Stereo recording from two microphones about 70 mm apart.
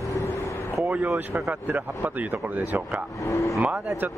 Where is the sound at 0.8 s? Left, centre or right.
Right.